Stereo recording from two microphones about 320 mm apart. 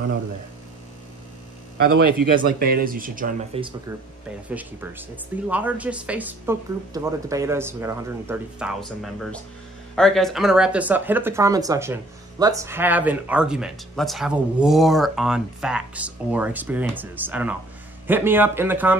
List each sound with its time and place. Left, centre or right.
1.8 s a man's voice: right
2.6 s speech: right
4.5 s speech: centre